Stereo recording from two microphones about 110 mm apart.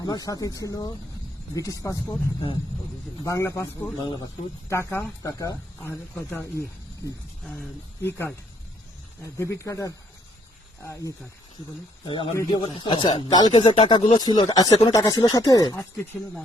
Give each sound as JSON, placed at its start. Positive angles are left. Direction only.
{"t": 0.0, "sound": "speech", "side_deg": 35}
{"t": 3.2, "sound": "speech", "side_deg": 25}
{"t": 4.7, "sound": "speech", "side_deg": 25}
{"t": 8.0, "sound": "speech", "side_deg": 20}
{"t": 12.0, "sound": "speech", "side_deg": 50}
{"t": 13.5, "sound": "speech", "side_deg": 50}